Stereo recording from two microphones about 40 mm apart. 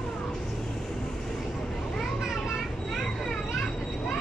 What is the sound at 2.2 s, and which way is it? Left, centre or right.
Children playing, centre.